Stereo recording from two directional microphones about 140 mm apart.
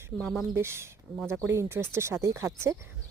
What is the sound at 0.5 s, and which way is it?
Speech, 20° right (ahead or behind).